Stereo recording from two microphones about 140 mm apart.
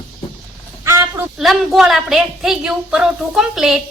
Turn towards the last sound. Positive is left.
turn(degrees=0)  # may be behind; listen again after turning